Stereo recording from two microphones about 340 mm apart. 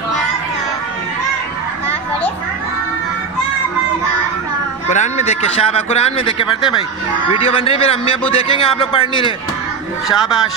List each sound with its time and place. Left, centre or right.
4.8 s speech: left
10.0 s a man's voice: centre